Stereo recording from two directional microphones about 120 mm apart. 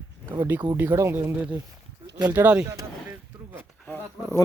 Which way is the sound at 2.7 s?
20° right (ahead or behind).